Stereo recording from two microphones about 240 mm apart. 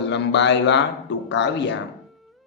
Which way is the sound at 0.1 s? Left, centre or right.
Left.